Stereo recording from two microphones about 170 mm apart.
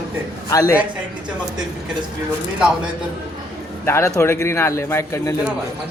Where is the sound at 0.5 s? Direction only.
20° left (ahead or behind).